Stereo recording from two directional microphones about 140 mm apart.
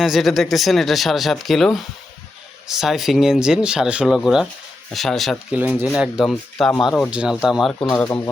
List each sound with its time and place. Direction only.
0.0 s speech: centre (ahead or behind)
5.5 s speech: 10° right (ahead or behind); by 7.1 s 5° left (ahead or behind)
7.1 s speech: 10° right (ahead or behind)
7.8 s speech: 10° left (ahead or behind)